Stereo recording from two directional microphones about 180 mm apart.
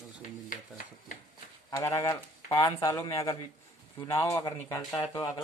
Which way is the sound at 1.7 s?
15° left (ahead or behind).